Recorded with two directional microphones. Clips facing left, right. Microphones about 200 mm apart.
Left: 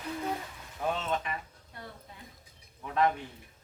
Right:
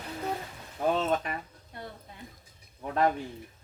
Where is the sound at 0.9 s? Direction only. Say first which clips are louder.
Right 5 dB; 45° right (ahead or behind).